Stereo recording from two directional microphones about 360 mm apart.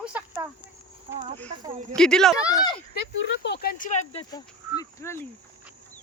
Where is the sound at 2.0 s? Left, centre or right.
Centre.